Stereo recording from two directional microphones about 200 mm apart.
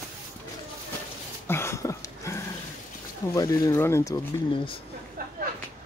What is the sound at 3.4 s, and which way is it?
Speech, 15° left (ahead or behind).